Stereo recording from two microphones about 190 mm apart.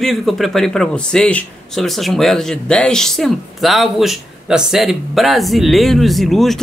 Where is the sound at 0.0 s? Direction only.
Centre (ahead or behind).